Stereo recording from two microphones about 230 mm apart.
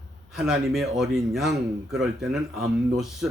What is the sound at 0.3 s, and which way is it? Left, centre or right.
A man's voice, centre.